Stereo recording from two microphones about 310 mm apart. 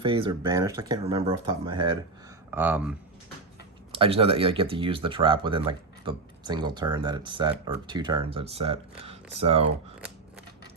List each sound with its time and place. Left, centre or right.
0.0 s speech: centre
3.9 s speech: centre
10.0 s scissors: centre